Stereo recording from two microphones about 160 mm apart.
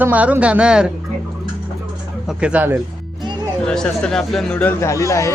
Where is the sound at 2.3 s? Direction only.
5° right (ahead or behind).